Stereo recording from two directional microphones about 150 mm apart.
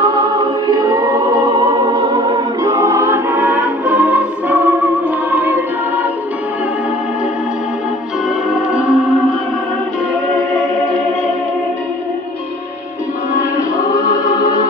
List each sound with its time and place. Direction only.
0.0 s music: 30° right (ahead or behind); by 5.6 s 15° right (ahead or behind)
8.5 s music: 5° right (ahead or behind)
13.4 s choir: 20° left (ahead or behind)